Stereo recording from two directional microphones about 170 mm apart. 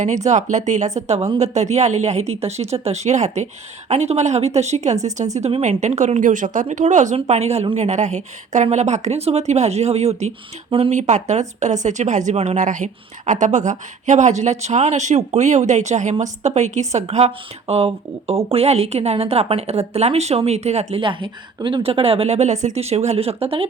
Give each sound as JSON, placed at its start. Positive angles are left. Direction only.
{"t": 0.3, "sound": "a woman's voice", "side_deg": -45}